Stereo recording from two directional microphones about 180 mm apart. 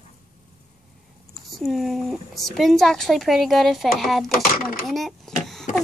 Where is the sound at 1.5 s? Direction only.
Centre (ahead or behind).